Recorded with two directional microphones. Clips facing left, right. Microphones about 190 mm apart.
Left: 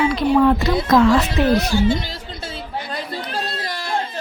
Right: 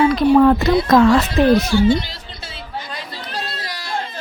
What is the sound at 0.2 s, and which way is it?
Speech, 50° right (ahead or behind).